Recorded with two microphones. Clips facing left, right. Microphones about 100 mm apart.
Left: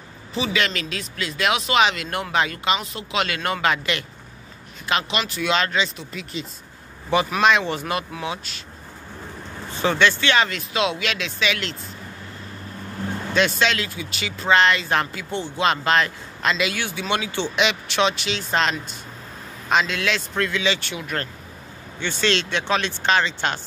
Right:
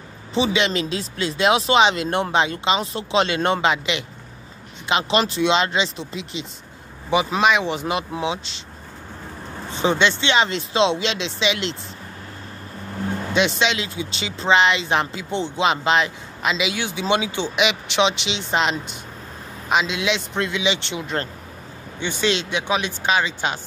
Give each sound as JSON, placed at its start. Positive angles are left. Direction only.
{"t": 0.3, "sound": "speech", "side_deg": -25}
{"t": 5.1, "sound": "speech", "side_deg": -30}
{"t": 7.1, "sound": "speech", "side_deg": -15}
{"t": 9.7, "sound": "speech", "side_deg": -20}
{"t": 13.3, "sound": "speech", "side_deg": -15}